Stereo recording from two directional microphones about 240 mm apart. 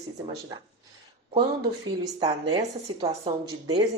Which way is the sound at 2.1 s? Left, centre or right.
Centre.